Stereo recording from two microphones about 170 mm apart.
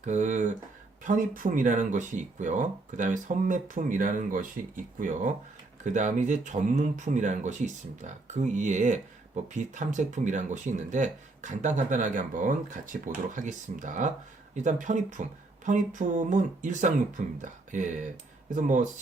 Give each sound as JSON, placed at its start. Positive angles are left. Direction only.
{"t": 0.0, "sound": "speech", "side_deg": -45}